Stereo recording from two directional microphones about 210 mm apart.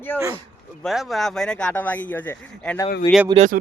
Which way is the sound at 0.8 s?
Centre (ahead or behind).